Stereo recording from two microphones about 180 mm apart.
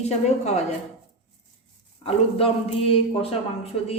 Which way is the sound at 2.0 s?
30° left (ahead or behind).